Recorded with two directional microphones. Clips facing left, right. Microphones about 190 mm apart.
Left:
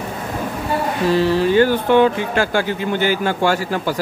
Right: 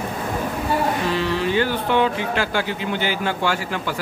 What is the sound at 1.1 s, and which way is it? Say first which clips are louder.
A man's voice: left 6 dB; 40° left (ahead or behind).